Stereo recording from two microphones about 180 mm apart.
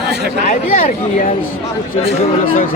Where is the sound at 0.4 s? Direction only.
45° left (ahead or behind).